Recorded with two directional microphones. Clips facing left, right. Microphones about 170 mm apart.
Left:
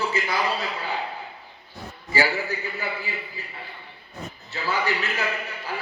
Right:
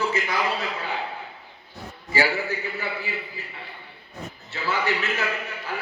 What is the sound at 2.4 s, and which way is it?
Speech, 40° left (ahead or behind).